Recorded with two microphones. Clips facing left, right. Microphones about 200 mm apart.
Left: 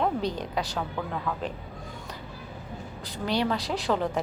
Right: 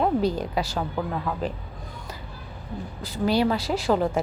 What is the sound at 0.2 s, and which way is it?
Speech, 5° right (ahead or behind).